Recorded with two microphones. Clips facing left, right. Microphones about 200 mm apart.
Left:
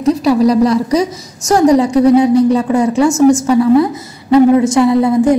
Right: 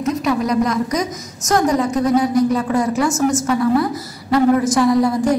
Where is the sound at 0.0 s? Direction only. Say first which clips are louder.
Left 8 dB; 35° left (ahead or behind).